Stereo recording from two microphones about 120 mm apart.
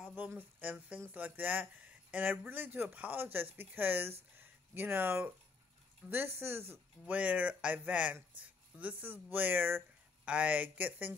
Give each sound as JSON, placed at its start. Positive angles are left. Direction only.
{"t": 0.0, "sound": "speech", "side_deg": -15}
{"t": 4.4, "sound": "a sound", "side_deg": -15}
{"t": 6.0, "sound": "speech", "side_deg": -20}